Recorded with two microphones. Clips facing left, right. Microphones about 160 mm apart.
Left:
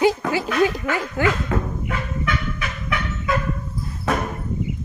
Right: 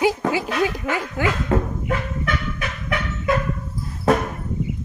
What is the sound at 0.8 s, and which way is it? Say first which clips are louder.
Speech: left 1 dB; 15° right (ahead or behind).